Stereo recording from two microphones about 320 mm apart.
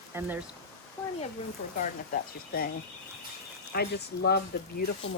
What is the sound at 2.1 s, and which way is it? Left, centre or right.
Speech, left.